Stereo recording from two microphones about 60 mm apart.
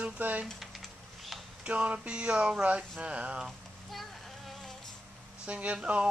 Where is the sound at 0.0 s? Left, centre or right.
Right.